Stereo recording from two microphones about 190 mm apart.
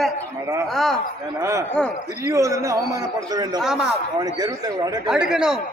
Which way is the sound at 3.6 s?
5° right (ahead or behind).